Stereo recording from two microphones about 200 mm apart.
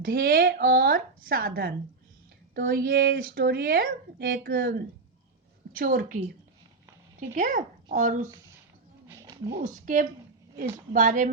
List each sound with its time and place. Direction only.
0.0 s speech: 50° right (ahead or behind)
7.3 s speech: 40° right (ahead or behind)
9.0 s a sound: 15° right (ahead or behind)
9.6 s speech: 40° right (ahead or behind)